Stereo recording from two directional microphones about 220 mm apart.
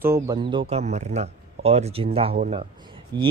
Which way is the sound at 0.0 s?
15° right (ahead or behind).